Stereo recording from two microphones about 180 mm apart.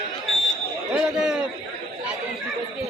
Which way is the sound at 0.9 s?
5° right (ahead or behind).